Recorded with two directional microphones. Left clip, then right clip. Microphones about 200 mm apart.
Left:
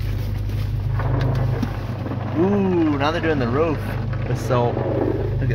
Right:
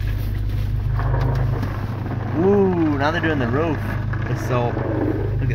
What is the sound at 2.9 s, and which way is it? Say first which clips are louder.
Speech: even; centre (ahead or behind).